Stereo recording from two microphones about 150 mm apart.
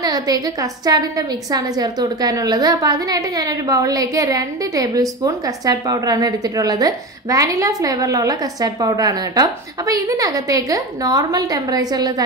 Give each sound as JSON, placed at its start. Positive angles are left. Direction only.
{"t": 0.0, "sound": "a woman's voice", "side_deg": -25}